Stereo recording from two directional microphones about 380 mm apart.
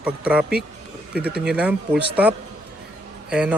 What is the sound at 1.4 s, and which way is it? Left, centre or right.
Speech, centre.